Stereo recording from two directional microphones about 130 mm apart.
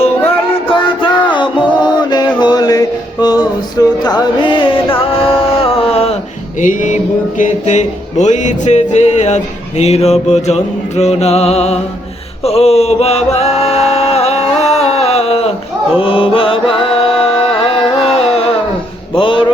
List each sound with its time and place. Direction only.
0.7 s music: 40° left (ahead or behind)
6.6 s music: 75° left (ahead or behind); by 15.5 s 50° left (ahead or behind)
16.0 s mantra: 40° left (ahead or behind)
19.2 s music: 40° left (ahead or behind)